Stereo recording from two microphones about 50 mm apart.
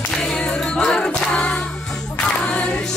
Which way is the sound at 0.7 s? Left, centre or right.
Centre.